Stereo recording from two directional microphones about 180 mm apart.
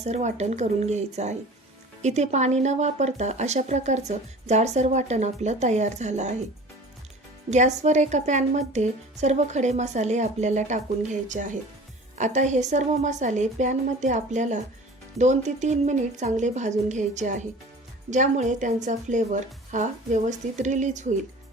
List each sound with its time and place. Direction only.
0.0 s speech: 40° right (ahead or behind)
7.5 s a woman's voice: 40° right (ahead or behind)